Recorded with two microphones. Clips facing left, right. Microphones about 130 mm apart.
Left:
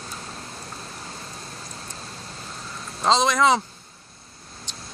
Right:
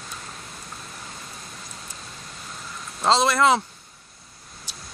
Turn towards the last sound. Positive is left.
turn(degrees=-10)  # may be behind; listen again after turning